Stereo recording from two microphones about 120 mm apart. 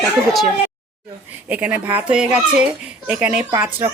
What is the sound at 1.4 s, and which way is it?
Speech, 10° right (ahead or behind).